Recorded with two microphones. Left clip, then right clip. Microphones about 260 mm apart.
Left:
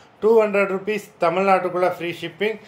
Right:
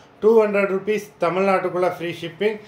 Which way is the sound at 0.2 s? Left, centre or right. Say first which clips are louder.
Even; centre.